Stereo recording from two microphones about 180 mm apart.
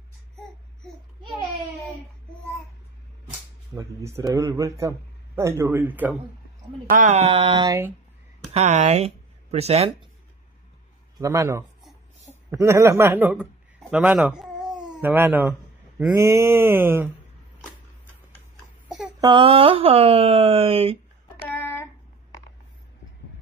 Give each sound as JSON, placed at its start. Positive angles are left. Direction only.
{"t": 3.7, "sound": "a man's voice", "side_deg": -15}
{"t": 6.9, "sound": "speech", "side_deg": -45}
{"t": 8.5, "sound": "speech", "side_deg": -40}
{"t": 11.1, "sound": "a man's voice", "side_deg": -15}
{"t": 19.2, "sound": "speech", "side_deg": -30}
{"t": 21.5, "sound": "a sound", "side_deg": 10}